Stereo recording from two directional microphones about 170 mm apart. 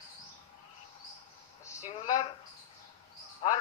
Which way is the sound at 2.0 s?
25° left (ahead or behind).